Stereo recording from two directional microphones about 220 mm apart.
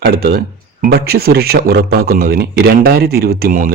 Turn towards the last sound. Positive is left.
turn(degrees=-40)  # may be behind; listen again after turning